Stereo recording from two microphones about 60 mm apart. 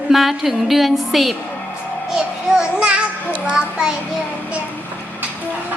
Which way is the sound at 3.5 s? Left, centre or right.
Centre.